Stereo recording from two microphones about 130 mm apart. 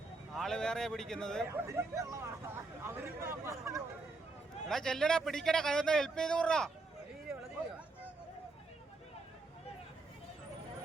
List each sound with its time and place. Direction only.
0.3 s a man's voice: 5° left (ahead or behind)
1.5 s speech: 20° right (ahead or behind)
4.7 s a man's voice: 5° left (ahead or behind)